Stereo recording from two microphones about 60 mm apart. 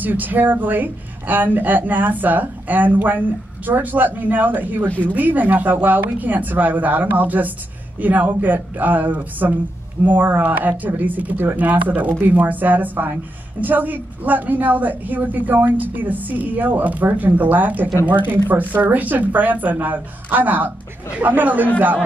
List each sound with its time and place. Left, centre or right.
0.0 s speech: right
4.8 s speech: left
5.1 s a woman's voice: right